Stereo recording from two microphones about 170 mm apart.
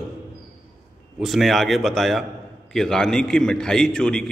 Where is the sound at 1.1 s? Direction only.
Centre (ahead or behind).